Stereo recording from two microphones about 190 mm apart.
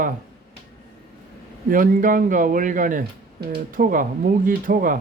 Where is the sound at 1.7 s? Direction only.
45° right (ahead or behind).